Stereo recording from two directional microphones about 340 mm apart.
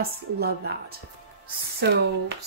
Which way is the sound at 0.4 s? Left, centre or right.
Right.